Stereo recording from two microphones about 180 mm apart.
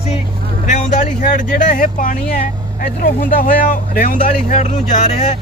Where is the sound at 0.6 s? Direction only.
40° left (ahead or behind).